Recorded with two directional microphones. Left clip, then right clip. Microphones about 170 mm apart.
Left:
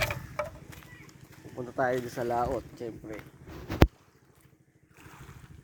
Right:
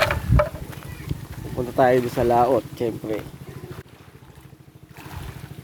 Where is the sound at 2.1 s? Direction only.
5° right (ahead or behind).